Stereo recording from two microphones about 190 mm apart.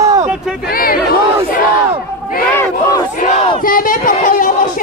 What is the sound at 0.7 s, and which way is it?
Chatter, 50° left (ahead or behind).